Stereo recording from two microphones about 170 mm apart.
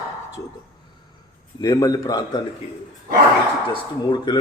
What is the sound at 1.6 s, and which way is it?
Speech, 20° left (ahead or behind).